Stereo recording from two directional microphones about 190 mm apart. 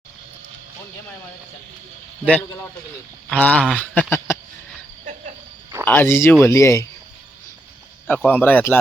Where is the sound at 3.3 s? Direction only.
5° left (ahead or behind).